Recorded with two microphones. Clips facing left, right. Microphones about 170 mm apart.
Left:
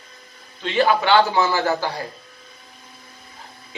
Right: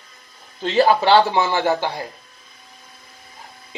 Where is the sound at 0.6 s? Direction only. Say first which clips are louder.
Right 3 dB; 40° right (ahead or behind).